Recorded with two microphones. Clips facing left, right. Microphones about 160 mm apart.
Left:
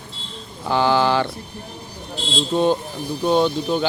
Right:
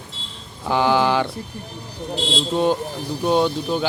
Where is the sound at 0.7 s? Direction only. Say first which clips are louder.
Even; 10° right (ahead or behind).